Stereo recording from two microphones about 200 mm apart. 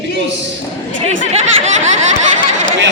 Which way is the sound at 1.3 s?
35° right (ahead or behind).